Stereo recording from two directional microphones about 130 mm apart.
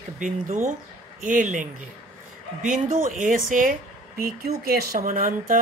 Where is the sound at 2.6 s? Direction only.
80° right.